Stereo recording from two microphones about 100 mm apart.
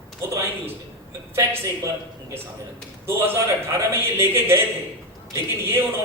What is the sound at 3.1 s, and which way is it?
A man's voice, 25° right (ahead or behind).